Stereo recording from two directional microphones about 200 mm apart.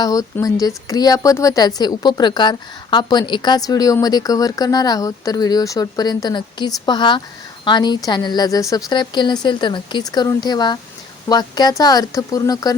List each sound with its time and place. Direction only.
0.0 s speech: 15° left (ahead or behind)